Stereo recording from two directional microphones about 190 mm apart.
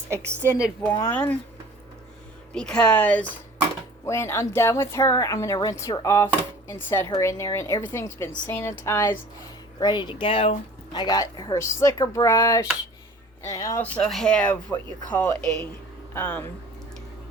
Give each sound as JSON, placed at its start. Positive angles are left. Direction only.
{"t": 0.3, "sound": "a woman's voice", "side_deg": -15}
{"t": 0.8, "sound": "speech", "side_deg": 15}
{"t": 2.5, "sound": "speech", "side_deg": 5}
{"t": 13.9, "sound": "speech", "side_deg": 0}